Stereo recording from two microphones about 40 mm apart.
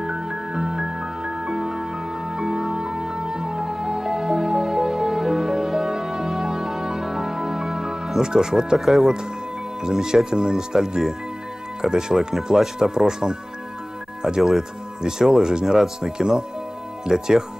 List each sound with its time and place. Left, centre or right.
0.0 s music: centre
8.7 s speech: centre